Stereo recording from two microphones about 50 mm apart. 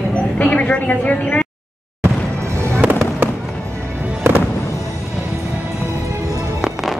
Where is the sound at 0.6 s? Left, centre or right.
Left.